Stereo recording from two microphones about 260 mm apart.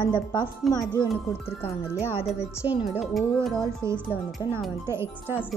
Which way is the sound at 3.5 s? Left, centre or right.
Centre.